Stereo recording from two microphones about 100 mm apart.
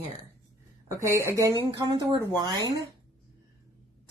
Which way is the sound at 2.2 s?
45° right (ahead or behind).